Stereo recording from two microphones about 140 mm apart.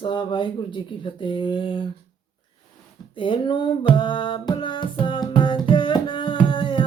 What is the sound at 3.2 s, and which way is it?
Speech, 35° left (ahead or behind).